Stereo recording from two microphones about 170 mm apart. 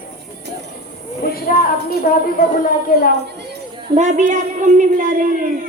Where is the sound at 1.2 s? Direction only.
60° left (ahead or behind).